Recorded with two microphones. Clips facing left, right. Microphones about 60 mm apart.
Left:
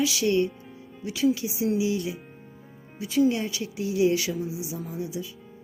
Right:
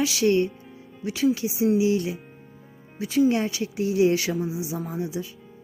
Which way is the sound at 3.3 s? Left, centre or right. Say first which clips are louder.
Right 3 dB; right.